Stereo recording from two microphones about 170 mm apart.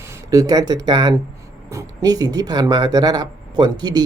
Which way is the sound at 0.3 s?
20° right (ahead or behind).